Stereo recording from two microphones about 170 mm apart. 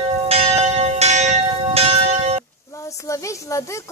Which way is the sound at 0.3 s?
35° right (ahead or behind).